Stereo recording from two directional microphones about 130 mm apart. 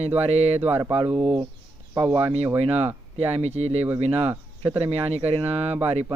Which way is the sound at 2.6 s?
55° right (ahead or behind).